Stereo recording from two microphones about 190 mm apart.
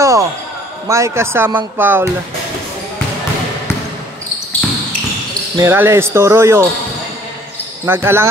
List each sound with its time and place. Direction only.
0.0 s basketball bounce: 15° right (ahead or behind)
0.8 s speech: 15° right (ahead or behind)
5.6 s speech: 10° right (ahead or behind)
7.8 s speech: 10° right (ahead or behind)